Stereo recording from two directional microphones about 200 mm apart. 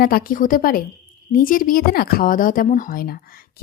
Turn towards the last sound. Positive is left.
turn(degrees=45)  # may be behind; listen again after turning